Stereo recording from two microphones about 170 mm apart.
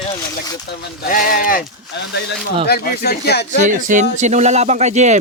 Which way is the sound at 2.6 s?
65° left (ahead or behind).